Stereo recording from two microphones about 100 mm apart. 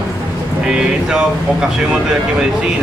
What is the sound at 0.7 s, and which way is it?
Speech, 5° right (ahead or behind).